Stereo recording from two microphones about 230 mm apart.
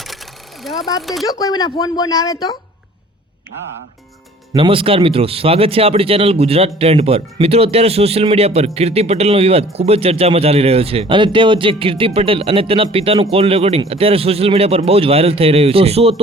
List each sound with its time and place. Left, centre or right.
0.6 s speech: centre
1.3 s speech: centre
4.5 s speech: right